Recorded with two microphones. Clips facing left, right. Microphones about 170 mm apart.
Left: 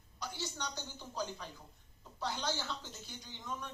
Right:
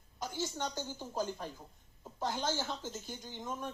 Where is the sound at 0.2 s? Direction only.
45° right (ahead or behind).